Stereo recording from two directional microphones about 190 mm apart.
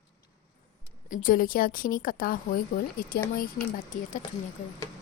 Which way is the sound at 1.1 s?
45° left (ahead or behind).